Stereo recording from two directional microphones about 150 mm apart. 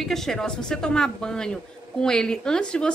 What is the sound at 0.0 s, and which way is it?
Speech, centre (ahead or behind).